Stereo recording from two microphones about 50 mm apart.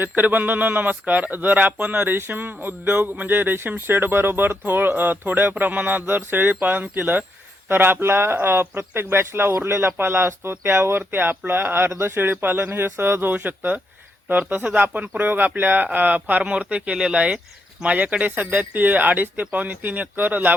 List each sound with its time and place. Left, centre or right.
0.2 s speech: right
2.0 s speech: right
13.3 s speech: right